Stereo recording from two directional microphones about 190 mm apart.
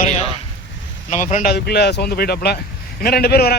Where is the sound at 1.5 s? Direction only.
60° left (ahead or behind).